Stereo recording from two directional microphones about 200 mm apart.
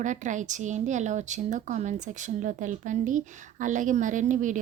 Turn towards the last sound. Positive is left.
turn(degrees=-40)  # may be behind; listen again after turning